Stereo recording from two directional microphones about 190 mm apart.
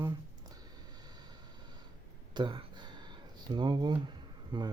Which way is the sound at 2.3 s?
25° right (ahead or behind).